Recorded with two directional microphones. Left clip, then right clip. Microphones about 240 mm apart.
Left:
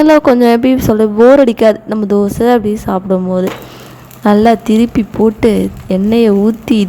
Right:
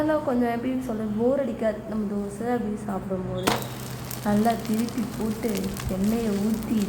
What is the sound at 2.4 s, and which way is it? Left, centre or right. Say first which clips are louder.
Speech: left 14 dB; left.